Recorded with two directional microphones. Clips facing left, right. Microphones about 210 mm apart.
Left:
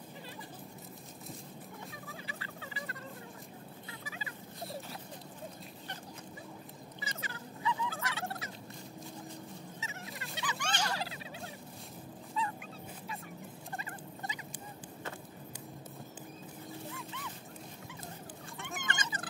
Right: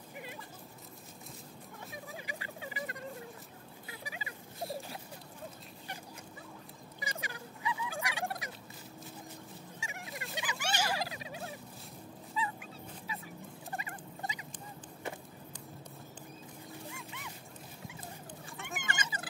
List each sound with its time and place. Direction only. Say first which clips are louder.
2.2 s vehicle: right 2 dB; 15° right (ahead or behind)
4.0 s a sound: right 3 dB; 15° right (ahead or behind)
7.0 s fowl: right 3 dB; 15° right (ahead or behind)
9.8 s a sound: right 1 dB; 15° right (ahead or behind)
12.4 s dog: even; 5° right (ahead or behind)
13.1 s vehicle: right 1 dB; centre (ahead or behind)
13.7 s fowl: right 2 dB; 15° right (ahead or behind)
18.6 s cat: even; 10° right (ahead or behind)